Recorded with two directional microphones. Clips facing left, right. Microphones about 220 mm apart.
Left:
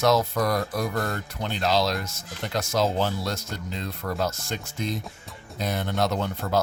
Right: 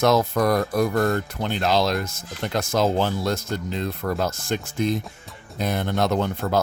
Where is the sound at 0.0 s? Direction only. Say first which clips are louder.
Right 3 dB; 55° right (ahead or behind).